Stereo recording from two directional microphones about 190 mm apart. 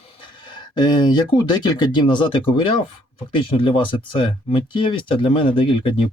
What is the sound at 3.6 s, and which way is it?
Speech, 25° left (ahead or behind).